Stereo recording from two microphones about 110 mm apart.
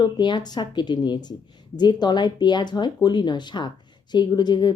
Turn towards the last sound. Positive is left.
turn(degrees=40)  # may be behind; listen again after turning